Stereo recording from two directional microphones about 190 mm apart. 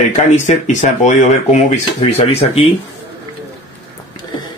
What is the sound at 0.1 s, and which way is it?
Speech, 40° left (ahead or behind).